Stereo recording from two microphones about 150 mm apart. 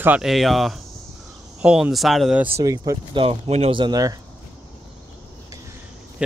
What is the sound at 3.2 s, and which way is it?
Speech, 40° right (ahead or behind).